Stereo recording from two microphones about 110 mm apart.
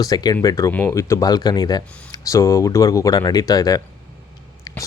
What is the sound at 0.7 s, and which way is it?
Speech, 15° left (ahead or behind).